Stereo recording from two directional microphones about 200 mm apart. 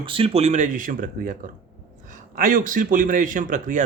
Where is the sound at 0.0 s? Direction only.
25° right (ahead or behind).